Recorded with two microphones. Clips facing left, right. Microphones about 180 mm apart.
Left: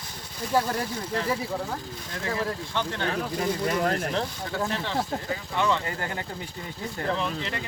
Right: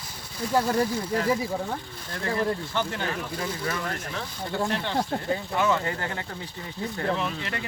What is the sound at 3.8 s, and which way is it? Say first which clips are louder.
Speech: left 7 dB; 60° left (ahead or behind).